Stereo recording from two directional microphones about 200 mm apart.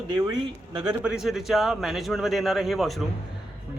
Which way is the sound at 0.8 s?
5° right (ahead or behind).